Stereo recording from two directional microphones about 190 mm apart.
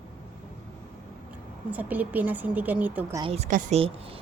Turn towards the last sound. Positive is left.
turn(degrees=-30)  # may be behind; listen again after turning